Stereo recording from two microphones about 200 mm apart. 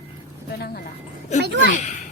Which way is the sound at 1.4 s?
60° right (ahead or behind).